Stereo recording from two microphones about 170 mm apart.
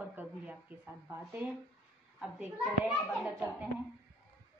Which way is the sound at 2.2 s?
10° right (ahead or behind).